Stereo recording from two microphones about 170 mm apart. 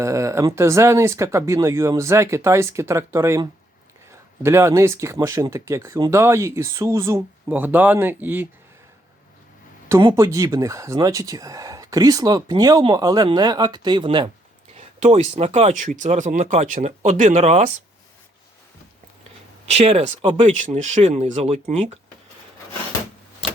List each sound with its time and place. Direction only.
0.0 s speech: 15° right (ahead or behind)
10.0 s speech: 25° right (ahead or behind)
14.8 s speech: 40° right (ahead or behind)
19.7 s speech: 40° right (ahead or behind)